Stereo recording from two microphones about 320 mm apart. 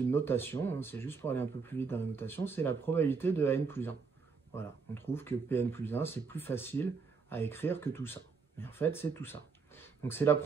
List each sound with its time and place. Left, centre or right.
0.1 s speech: centre